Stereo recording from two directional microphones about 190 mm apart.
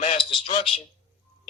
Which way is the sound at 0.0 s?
30° left (ahead or behind).